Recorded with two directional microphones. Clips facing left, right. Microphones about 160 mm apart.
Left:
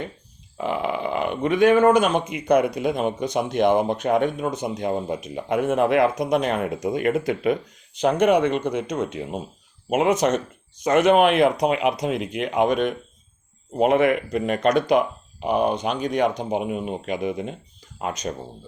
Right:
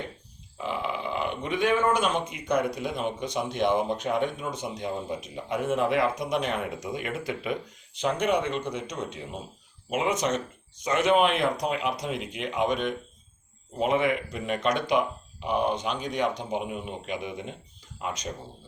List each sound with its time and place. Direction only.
0.5 s speech: 60° left (ahead or behind)
2.3 s speech: 70° left (ahead or behind)
3.0 s speech: 45° left (ahead or behind)
8.0 s speech: 60° left (ahead or behind)
12.4 s speech: 55° left (ahead or behind)